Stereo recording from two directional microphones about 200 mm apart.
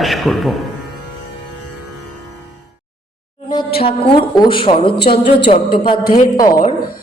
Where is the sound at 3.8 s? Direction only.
25° left (ahead or behind).